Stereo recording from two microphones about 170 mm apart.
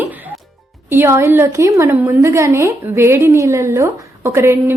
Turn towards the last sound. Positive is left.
turn(degrees=-15)  # may be behind; listen again after turning